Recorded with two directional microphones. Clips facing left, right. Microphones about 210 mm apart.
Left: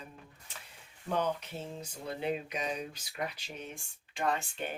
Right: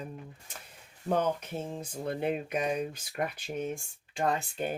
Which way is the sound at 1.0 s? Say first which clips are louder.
Right 4 dB; 45° right (ahead or behind).